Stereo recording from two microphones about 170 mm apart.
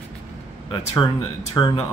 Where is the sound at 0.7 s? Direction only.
25° left (ahead or behind).